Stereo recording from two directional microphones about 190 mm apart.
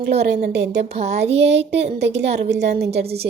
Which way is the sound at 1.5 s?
65° right (ahead or behind).